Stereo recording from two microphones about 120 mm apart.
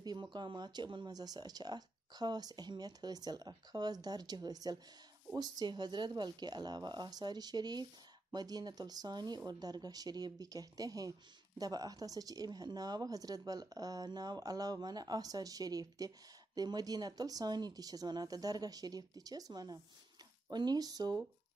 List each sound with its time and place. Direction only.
0.0 s speech: 40° right (ahead or behind)